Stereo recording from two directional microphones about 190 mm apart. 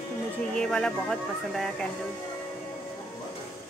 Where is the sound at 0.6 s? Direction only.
5° left (ahead or behind).